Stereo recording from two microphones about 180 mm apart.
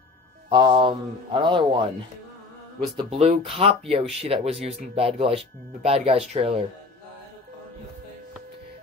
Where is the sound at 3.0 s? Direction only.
35° right (ahead or behind).